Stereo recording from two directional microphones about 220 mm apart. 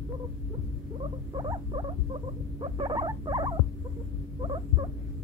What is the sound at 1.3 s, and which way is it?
Rodents, 20° right (ahead or behind).